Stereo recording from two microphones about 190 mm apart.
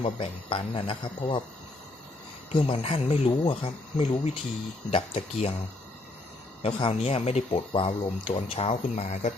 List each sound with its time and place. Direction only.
0.0 s speech: 25° left (ahead or behind)
2.5 s speech: 30° left (ahead or behind)
6.6 s speech: 30° left (ahead or behind)